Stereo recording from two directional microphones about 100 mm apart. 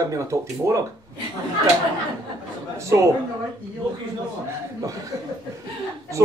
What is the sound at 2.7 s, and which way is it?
Speech, 30° right (ahead or behind).